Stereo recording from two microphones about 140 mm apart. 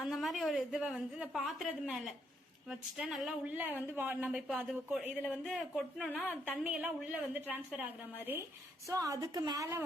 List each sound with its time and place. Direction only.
0.0 s a woman's voice: centre (ahead or behind)
5.7 s speech: 10° left (ahead or behind)
6.5 s speech: 10° right (ahead or behind)
8.9 s a woman's voice: 25° right (ahead or behind)